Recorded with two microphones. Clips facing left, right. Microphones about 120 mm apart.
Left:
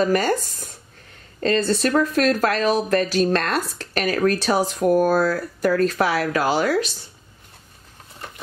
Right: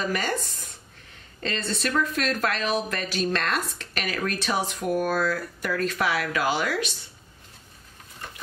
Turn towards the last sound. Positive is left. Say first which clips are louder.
# left 6 dB
turn(degrees=35)  # may be behind; listen again after turning